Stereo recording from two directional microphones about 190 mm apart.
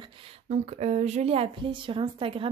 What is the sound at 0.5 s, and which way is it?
A woman's voice, 35° right (ahead or behind).